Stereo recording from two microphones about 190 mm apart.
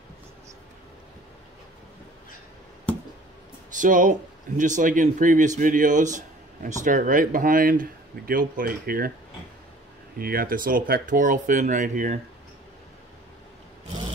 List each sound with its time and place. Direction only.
3.7 s speech: 45° right (ahead or behind)
10.1 s speech: 50° right (ahead or behind)